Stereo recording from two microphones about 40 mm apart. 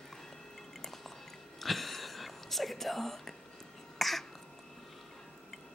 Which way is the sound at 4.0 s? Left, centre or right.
Centre.